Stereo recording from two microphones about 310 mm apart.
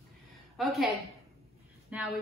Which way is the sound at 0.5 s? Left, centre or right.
Centre.